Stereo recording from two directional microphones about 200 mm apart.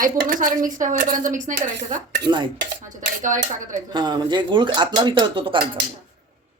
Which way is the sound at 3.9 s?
20° right (ahead or behind).